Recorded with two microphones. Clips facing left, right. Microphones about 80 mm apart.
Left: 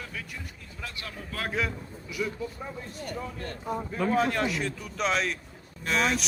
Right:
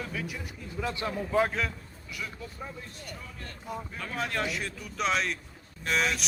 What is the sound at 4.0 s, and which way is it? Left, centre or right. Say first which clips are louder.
Speech: left 7 dB; centre.